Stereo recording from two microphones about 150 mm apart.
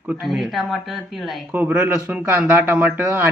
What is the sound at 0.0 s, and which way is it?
Speech, 5° right (ahead or behind).